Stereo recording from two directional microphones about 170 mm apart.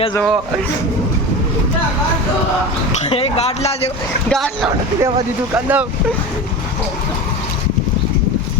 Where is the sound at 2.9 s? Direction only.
35° left (ahead or behind).